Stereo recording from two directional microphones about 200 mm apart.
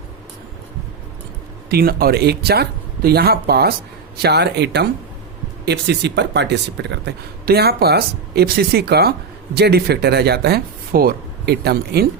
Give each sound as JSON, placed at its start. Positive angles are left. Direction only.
{"t": 1.7, "sound": "a man's voice", "side_deg": -50}